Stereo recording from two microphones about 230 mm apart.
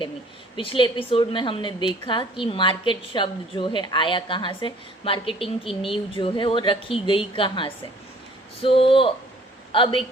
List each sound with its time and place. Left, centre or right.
0.5 s a woman's voice: left